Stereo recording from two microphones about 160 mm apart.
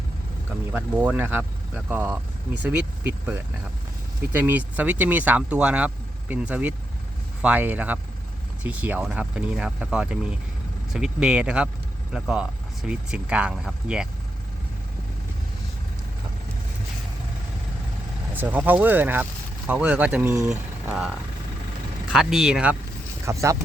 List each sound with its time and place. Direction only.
0.7 s speech: 10° right (ahead or behind)
18.3 s speech: 10° right (ahead or behind)
23.2 s speech: 20° right (ahead or behind)